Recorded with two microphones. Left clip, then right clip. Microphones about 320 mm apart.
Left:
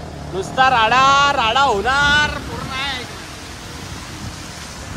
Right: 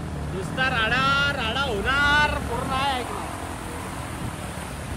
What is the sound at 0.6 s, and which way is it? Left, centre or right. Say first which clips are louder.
Speech: left 10 dB; centre.